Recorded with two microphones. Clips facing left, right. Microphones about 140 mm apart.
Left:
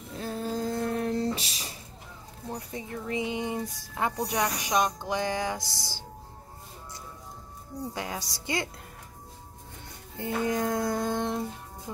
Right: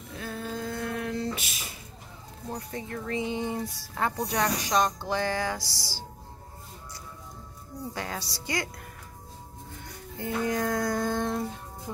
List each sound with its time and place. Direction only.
0.1 s a sound: 35° left (ahead or behind)
2.5 s speech: 15° left (ahead or behind)
7.9 s speech: 15° left (ahead or behind)
10.1 s music: 20° left (ahead or behind)